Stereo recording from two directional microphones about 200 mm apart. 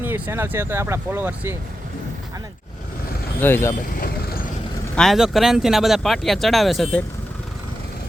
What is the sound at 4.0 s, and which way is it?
Vehicle, 50° left (ahead or behind).